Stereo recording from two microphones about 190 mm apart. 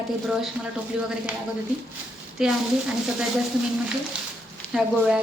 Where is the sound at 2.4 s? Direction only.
5° right (ahead or behind).